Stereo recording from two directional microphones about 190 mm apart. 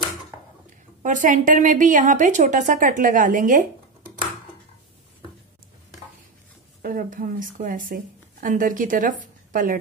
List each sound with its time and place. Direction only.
1.0 s a woman's voice: 40° right (ahead or behind)
6.8 s speech: 45° right (ahead or behind)